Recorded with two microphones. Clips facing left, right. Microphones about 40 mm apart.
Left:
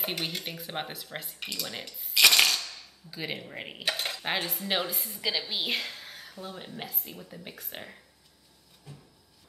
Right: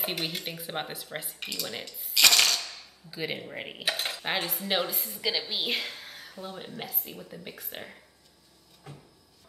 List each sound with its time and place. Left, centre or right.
0.0 s speech: centre
2.6 s cutlery: centre
8.9 s cupboard open or close: right